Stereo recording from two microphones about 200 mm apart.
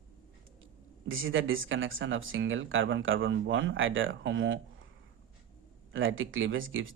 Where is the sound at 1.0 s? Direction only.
80° right.